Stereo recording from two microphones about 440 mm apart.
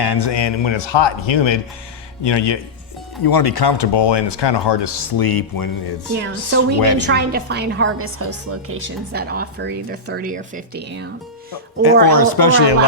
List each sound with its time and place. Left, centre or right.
0.0 s speech: left
3.2 s speech: left
6.2 s a woman's voice: right
11.8 s a woman's voice: left